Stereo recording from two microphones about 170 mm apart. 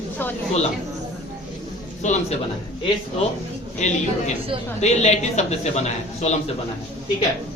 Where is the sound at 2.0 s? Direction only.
45° left (ahead or behind).